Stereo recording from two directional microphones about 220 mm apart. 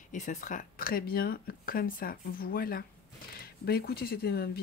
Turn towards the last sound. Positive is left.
turn(degrees=45)  # may be behind; listen again after turning